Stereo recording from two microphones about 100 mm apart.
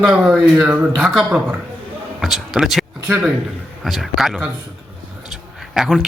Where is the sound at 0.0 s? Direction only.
5° right (ahead or behind).